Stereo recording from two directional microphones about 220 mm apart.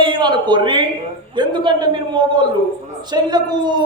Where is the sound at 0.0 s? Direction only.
20° right (ahead or behind).